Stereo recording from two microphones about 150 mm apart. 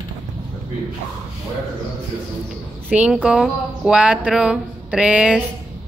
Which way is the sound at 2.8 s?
5° right (ahead or behind).